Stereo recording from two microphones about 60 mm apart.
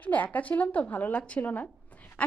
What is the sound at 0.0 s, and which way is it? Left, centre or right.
Speech, left.